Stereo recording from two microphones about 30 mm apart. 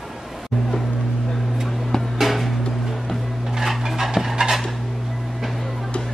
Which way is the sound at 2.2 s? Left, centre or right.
Centre.